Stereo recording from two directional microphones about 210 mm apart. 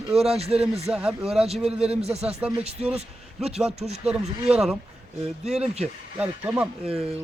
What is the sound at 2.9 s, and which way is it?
A man's voice, 30° right (ahead or behind).